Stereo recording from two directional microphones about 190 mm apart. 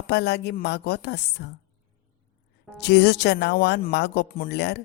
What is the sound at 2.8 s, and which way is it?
Speech, 60° left (ahead or behind).